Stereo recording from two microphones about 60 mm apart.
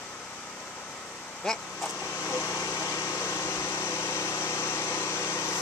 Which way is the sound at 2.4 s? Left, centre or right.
Left.